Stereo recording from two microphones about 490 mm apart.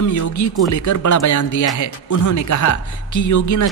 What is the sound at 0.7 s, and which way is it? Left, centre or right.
Speech, left.